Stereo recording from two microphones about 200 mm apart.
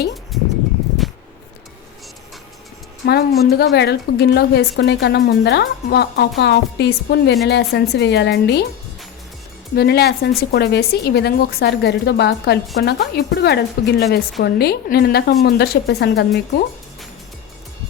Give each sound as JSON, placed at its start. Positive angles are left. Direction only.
{"t": 0.3, "sound": "a sound", "side_deg": 0}
{"t": 3.1, "sound": "a woman's voice", "side_deg": 50}
{"t": 9.7, "sound": "a woman's voice", "side_deg": 55}